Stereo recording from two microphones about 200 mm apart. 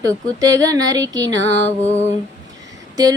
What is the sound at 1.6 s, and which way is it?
Music, 35° left (ahead or behind).